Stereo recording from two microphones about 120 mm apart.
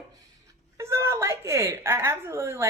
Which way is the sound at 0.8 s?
25° right (ahead or behind).